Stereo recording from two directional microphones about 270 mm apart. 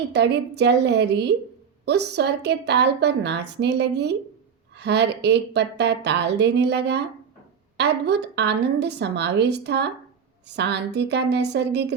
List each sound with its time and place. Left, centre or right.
0.1 s a woman's voice: right